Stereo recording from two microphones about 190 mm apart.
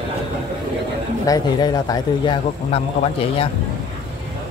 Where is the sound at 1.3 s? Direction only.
20° left (ahead or behind).